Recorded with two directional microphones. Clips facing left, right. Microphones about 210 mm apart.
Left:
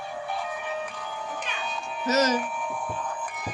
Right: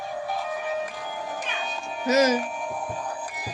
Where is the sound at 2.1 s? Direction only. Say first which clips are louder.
Right 3 dB; 10° right (ahead or behind).